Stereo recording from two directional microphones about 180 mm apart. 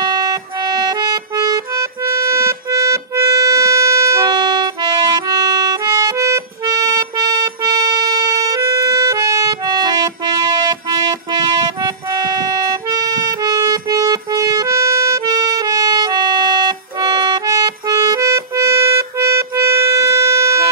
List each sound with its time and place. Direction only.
0.0 s music: 20° right (ahead or behind)